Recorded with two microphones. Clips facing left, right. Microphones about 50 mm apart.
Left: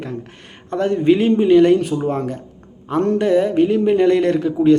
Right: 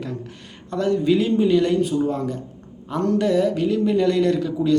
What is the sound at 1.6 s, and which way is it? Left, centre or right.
A man's voice, left.